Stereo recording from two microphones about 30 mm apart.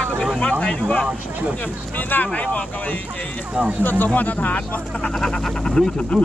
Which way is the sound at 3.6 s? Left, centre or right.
Right.